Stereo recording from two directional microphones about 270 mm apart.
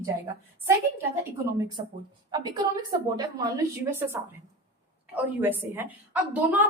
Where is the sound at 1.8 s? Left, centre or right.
Right.